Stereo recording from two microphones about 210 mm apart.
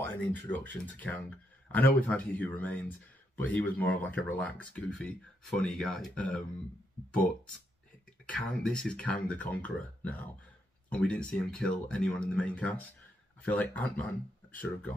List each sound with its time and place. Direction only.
0.0 s speech: 10° left (ahead or behind)
8.3 s speech: 5° left (ahead or behind)